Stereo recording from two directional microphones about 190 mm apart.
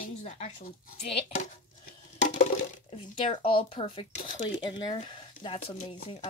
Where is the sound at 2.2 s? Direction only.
40° left (ahead or behind).